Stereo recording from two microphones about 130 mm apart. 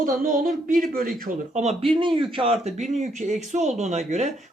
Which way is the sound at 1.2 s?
75° right (ahead or behind).